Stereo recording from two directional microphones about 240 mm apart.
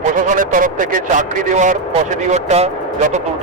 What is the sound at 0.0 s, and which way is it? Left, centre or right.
A man's voice, right.